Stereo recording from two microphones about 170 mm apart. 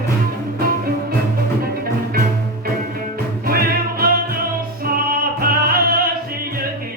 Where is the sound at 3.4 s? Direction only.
60° right (ahead or behind).